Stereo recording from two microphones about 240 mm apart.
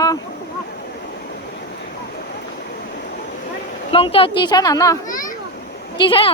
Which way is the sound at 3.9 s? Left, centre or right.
Left.